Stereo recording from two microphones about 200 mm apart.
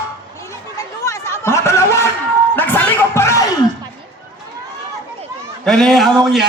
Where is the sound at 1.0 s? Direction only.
15° left (ahead or behind).